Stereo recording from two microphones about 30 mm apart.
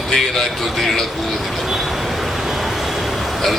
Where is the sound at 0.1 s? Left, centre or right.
Centre.